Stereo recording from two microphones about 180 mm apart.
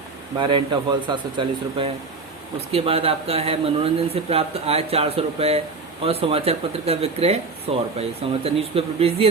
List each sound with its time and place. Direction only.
0.3 s speech: 25° right (ahead or behind)